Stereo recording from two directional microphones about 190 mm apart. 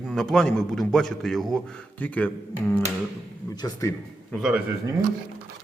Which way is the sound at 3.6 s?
15° left (ahead or behind).